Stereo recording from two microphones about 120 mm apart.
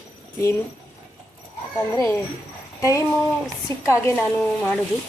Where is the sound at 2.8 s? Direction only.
25° left (ahead or behind).